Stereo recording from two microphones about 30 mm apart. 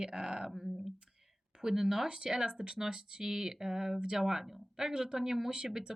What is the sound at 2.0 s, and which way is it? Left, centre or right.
Speech, right.